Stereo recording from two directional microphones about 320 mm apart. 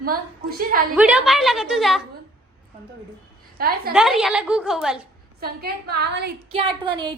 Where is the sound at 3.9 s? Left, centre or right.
Centre.